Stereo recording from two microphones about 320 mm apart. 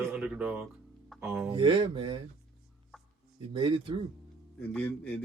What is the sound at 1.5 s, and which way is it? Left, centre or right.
Speech, centre.